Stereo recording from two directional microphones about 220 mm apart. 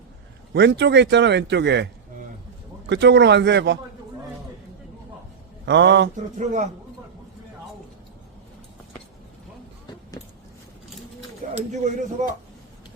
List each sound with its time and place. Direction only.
0.5 s speech: 50° right (ahead or behind)
2.9 s speech: 50° right (ahead or behind)
5.6 s speech: 55° right (ahead or behind)
6.3 s speech: 35° right (ahead or behind)
11.4 s a sound: 35° right (ahead or behind)
12.2 s speech: 30° right (ahead or behind)